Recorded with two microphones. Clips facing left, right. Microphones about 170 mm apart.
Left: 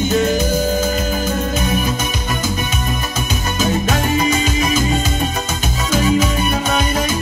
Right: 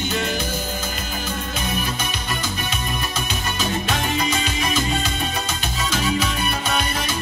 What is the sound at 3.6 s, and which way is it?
Music, 45° left (ahead or behind).